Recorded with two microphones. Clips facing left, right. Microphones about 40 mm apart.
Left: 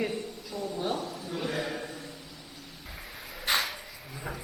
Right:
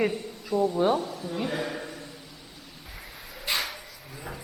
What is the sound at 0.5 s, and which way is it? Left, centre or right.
A woman's voice, right.